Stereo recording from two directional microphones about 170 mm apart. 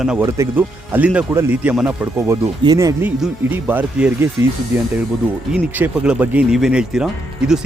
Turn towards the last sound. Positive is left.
turn(degrees=-5)  # may be behind; listen again after turning